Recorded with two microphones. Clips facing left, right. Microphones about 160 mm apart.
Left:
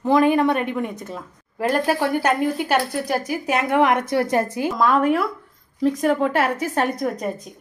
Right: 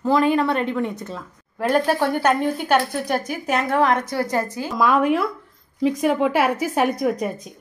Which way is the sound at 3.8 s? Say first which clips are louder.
Left 3 dB; 15° left (ahead or behind).